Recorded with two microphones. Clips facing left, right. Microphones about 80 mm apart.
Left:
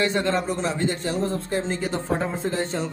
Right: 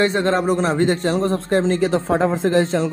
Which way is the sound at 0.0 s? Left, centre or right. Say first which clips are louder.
Right 5 dB; right.